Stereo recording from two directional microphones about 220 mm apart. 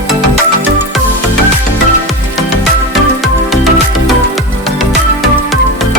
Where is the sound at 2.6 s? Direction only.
Centre (ahead or behind).